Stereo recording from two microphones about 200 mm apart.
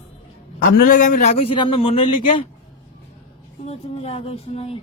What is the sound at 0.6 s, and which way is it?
Speech, 40° left (ahead or behind).